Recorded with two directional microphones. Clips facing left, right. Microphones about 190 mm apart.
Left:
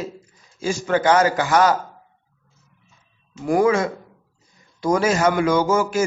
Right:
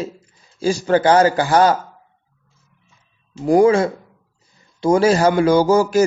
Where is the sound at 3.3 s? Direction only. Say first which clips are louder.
Right 5 dB; 30° right (ahead or behind).